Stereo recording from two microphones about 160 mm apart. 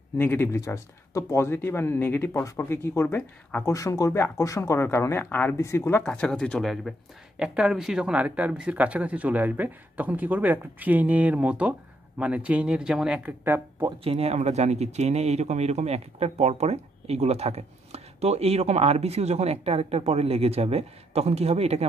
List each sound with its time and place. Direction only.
0.2 s speech: 15° left (ahead or behind)
6.0 s speech: 5° left (ahead or behind); by 13.8 s 15° right (ahead or behind)
13.8 s speech: 40° right (ahead or behind)